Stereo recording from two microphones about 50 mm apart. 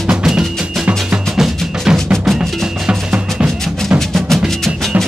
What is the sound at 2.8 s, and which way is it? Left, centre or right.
Music, right.